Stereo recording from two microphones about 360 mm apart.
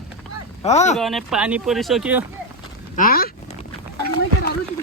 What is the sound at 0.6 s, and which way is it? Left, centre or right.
Speech, centre.